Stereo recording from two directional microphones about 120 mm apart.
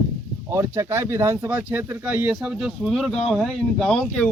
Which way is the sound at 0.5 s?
25° right (ahead or behind).